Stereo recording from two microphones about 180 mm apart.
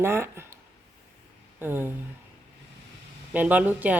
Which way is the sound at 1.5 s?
10° right (ahead or behind).